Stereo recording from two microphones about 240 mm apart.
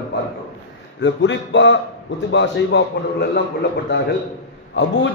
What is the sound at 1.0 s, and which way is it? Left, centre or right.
A man's voice, left.